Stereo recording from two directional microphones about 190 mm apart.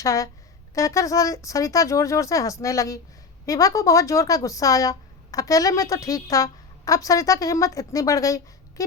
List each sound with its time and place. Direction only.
0.0 s speech: 15° left (ahead or behind)